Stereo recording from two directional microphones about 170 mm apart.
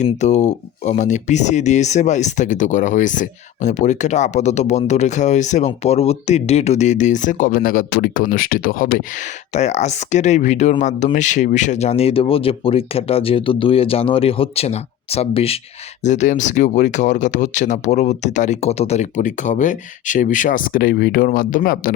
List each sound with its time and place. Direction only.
0.0 s speech: 45° left (ahead or behind)
9.6 s speech: 40° left (ahead or behind)
16.0 s speech: 45° left (ahead or behind)